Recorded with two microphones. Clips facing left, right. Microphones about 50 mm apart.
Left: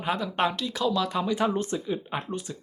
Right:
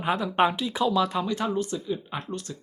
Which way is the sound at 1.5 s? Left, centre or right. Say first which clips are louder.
Even; left.